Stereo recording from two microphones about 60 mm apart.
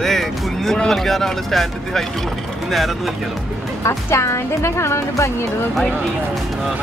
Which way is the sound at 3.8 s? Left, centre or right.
Left.